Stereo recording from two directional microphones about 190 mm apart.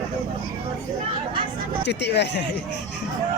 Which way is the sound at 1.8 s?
60° left (ahead or behind).